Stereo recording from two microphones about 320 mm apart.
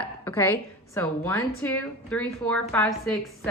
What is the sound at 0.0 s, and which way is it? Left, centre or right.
A woman's voice, centre.